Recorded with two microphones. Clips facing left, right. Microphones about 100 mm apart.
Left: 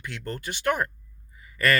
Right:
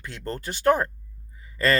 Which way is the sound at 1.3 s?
30° right (ahead or behind).